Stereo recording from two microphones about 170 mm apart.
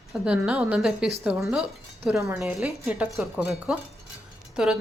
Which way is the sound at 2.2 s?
10° right (ahead or behind).